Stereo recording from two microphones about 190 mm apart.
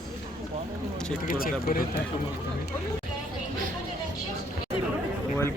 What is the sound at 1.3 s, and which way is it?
Speech, 50° left (ahead or behind).